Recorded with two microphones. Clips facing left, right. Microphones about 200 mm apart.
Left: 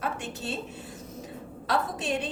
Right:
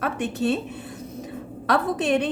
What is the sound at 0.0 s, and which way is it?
Speech, 60° right (ahead or behind).